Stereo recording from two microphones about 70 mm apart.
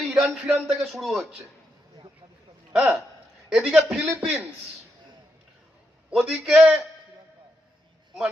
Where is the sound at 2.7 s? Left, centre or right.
Centre.